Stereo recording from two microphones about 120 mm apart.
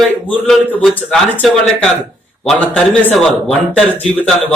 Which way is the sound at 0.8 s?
Centre (ahead or behind).